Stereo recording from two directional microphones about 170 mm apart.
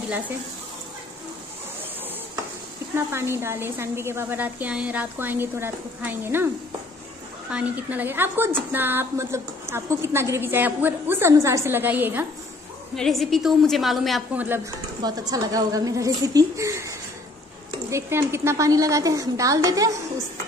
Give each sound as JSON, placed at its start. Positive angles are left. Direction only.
{"t": 3.1, "sound": "a woman's voice", "side_deg": -15}
{"t": 7.5, "sound": "a woman's voice", "side_deg": -10}
{"t": 12.9, "sound": "a woman's voice", "side_deg": 0}
{"t": 15.0, "sound": "a woman's voice", "side_deg": -25}